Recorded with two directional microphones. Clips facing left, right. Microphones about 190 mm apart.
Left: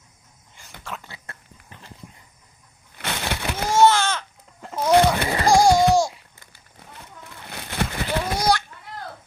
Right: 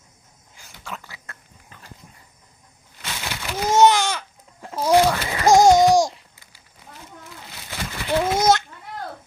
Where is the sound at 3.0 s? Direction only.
65° left (ahead or behind).